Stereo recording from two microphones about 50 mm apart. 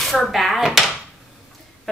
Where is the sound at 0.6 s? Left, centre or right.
Centre.